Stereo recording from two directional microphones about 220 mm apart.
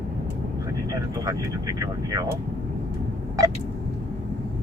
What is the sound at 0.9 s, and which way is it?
Speech, 15° right (ahead or behind).